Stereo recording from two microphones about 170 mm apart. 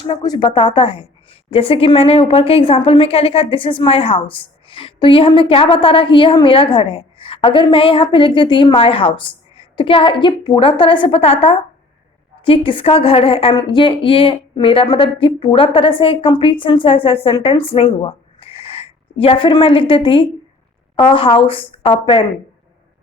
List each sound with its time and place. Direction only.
0.1 s a woman's voice: 25° left (ahead or behind)